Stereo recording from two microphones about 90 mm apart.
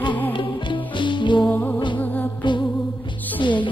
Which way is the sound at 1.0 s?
60° left (ahead or behind).